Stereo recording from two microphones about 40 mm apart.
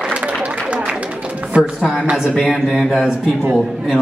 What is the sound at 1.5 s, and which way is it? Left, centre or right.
Speech, right.